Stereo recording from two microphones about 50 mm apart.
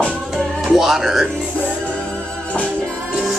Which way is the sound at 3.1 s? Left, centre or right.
Centre.